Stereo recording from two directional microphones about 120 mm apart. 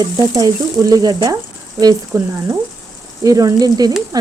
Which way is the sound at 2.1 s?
25° right (ahead or behind).